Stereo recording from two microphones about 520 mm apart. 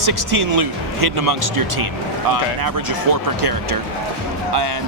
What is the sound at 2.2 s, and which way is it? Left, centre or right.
Speech, right.